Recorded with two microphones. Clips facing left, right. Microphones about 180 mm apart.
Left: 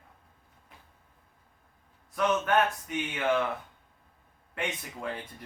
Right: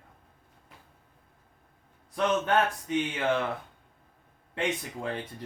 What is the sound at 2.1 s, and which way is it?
Speech, 25° right (ahead or behind).